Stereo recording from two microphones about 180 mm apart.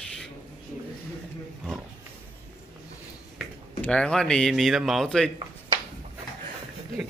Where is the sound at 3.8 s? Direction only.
5° left (ahead or behind).